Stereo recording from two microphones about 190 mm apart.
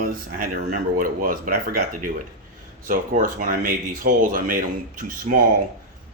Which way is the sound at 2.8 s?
45° right (ahead or behind).